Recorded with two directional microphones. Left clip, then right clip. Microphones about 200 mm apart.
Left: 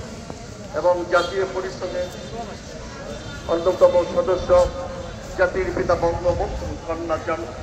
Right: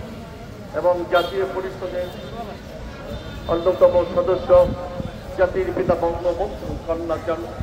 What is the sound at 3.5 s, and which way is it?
Speech, centre (ahead or behind).